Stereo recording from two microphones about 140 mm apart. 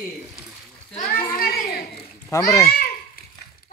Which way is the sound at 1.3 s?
90° left.